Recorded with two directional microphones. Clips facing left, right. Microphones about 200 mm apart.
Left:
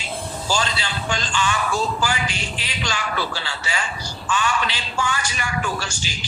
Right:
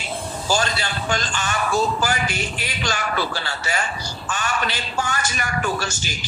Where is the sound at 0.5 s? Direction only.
45° right (ahead or behind).